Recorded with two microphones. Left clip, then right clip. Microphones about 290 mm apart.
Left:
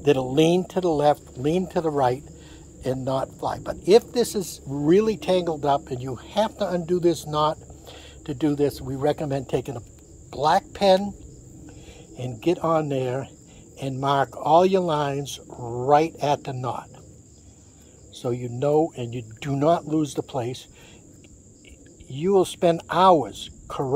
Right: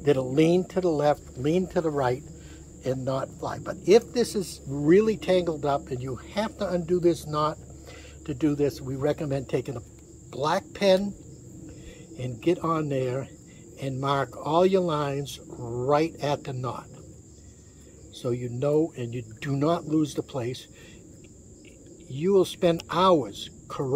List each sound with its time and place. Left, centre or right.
0.0 s speech: left
12.2 s speech: left
18.1 s speech: centre
22.0 s speech: centre